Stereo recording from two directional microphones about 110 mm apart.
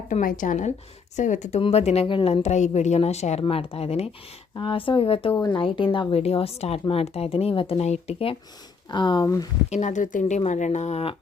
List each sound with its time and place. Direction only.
0.1 s speech: 90° left
1.6 s speech: 75° left (ahead or behind)
2.0 s speech: 50° left (ahead or behind)
2.3 s a woman's voice: 85° left
3.4 s speech: 60° left (ahead or behind)
4.5 s speech: 50° left (ahead or behind); by 8.4 s 65° left (ahead or behind)
8.9 s speech: 45° left (ahead or behind)
9.2 s speech: 30° left (ahead or behind)
9.6 s speech: 90° left